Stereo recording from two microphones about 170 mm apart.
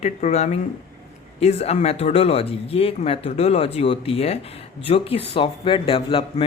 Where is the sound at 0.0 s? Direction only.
40° left (ahead or behind).